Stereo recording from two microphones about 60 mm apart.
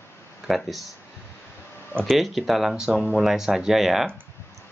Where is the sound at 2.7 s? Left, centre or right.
Centre.